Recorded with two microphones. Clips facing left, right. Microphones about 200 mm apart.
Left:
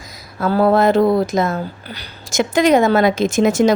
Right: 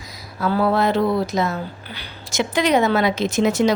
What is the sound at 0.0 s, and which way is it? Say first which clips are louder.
Speech: left 3 dB; 45° left (ahead or behind).